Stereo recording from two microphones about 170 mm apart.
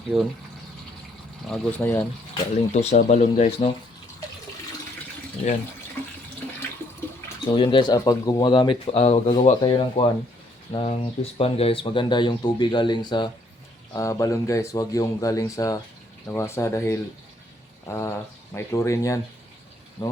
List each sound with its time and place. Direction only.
0.1 s speech: centre (ahead or behind)
1.5 s speech: 5° left (ahead or behind)
2.7 s speech: 45° left (ahead or behind)
5.4 s speech: 40° left (ahead or behind)
7.5 s speech: 30° left (ahead or behind)